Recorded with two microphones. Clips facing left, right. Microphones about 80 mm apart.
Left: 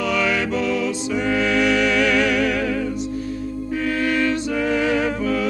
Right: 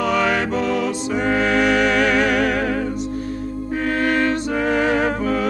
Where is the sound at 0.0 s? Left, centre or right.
Right.